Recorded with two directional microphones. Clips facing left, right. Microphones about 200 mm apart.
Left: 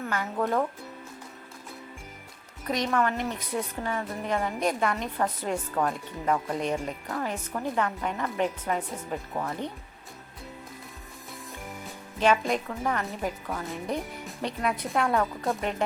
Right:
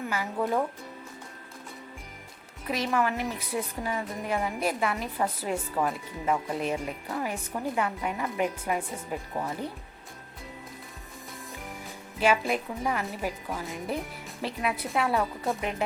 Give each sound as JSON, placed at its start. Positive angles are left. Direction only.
{"t": 0.1, "sound": "a woman's voice", "side_deg": -5}
{"t": 2.6, "sound": "a woman's voice", "side_deg": -5}
{"t": 12.2, "sound": "a woman's voice", "side_deg": -10}